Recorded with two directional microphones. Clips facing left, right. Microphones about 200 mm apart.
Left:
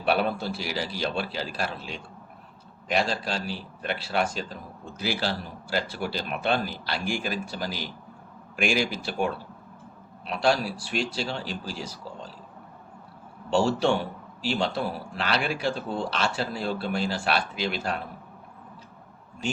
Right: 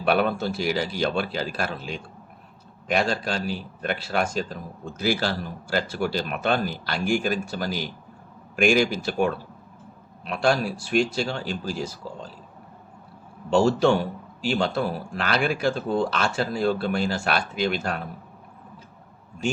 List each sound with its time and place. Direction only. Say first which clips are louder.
0.1 s speech: right 3 dB; 50° right (ahead or behind)
13.5 s speech: right 4 dB; 45° right (ahead or behind)
15.1 s speech: right 3 dB; 50° right (ahead or behind)